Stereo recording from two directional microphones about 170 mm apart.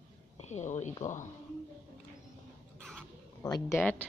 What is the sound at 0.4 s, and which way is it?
Speech, 40° left (ahead or behind).